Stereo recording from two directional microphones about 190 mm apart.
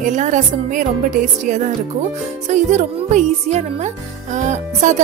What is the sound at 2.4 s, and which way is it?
A woman's voice, 40° right (ahead or behind).